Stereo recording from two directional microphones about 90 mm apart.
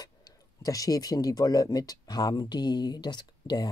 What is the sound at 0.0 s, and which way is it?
Speech, 45° left (ahead or behind).